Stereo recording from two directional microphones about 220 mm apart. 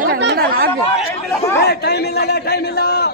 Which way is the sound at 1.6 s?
45° left (ahead or behind).